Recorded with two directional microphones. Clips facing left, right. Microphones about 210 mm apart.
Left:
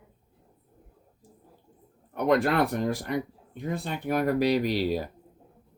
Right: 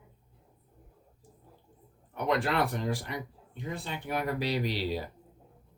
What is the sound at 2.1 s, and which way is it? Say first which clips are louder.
Speech: left 5 dB; 45° left (ahead or behind).